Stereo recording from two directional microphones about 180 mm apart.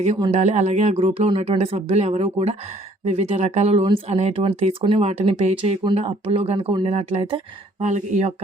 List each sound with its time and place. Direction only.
0.2 s speech: 35° right (ahead or behind)